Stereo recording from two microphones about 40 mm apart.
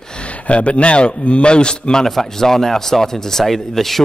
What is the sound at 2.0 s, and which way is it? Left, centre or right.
Speech, centre.